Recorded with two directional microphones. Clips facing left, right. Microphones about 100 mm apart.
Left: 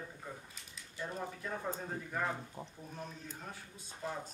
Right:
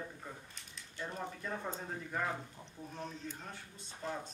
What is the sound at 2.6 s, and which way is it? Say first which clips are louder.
Speech: left 7 dB; 45° left (ahead or behind).